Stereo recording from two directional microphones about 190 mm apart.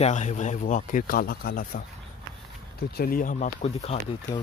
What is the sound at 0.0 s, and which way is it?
Speech, 40° left (ahead or behind).